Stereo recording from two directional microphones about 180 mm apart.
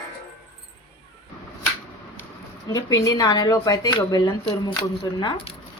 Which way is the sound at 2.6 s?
20° left (ahead or behind).